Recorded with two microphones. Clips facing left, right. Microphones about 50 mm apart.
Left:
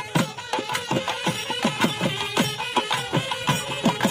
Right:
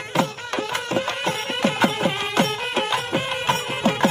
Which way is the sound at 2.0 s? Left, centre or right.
Right.